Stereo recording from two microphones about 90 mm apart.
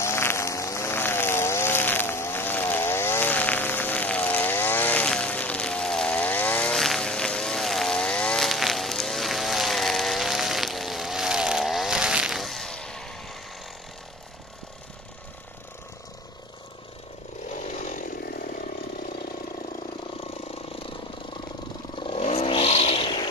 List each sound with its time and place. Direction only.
0.0 s vehicle: 30° left (ahead or behind)
6.7 s vehicle: 5° left (ahead or behind)
8.5 s vehicle: centre (ahead or behind)
12.4 s vehicle: centre (ahead or behind)
21.9 s vehicle: 75° left (ahead or behind)